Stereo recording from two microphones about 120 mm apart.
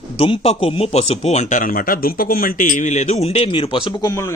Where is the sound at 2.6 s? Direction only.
90° left; by 3.9 s 45° left (ahead or behind).